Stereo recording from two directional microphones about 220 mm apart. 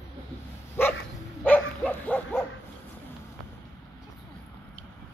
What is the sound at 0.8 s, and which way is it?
Dog, 10° left (ahead or behind).